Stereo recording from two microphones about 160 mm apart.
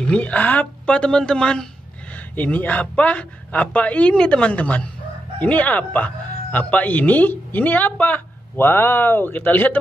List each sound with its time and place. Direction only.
0.1 s speech: 10° left (ahead or behind)